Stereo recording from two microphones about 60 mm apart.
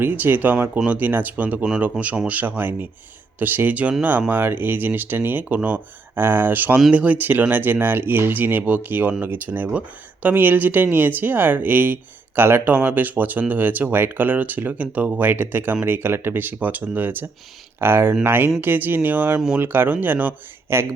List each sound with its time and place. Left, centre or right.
0.0 s speech: right
6.1 s speech: right
6.9 s speech: right
15.3 s speech: right
17.7 s speech: right
20.7 s speech: right